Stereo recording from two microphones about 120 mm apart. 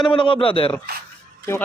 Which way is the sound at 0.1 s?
45° left (ahead or behind).